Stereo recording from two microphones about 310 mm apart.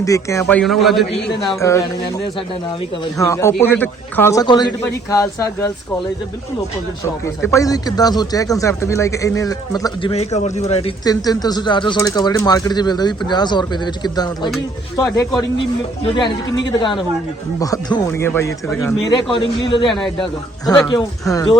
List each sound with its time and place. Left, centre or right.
0.0 s a man's voice: centre
3.2 s speech: centre
7.0 s speech: centre